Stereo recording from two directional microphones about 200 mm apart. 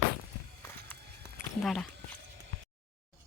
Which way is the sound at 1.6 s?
Centre (ahead or behind).